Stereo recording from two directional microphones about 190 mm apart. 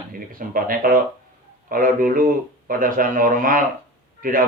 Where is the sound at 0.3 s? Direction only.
50° right (ahead or behind).